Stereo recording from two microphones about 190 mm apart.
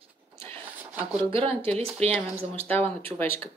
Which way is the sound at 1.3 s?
30° right (ahead or behind).